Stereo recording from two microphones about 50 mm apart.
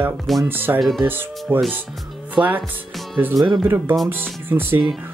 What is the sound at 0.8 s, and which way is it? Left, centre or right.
Speech, centre.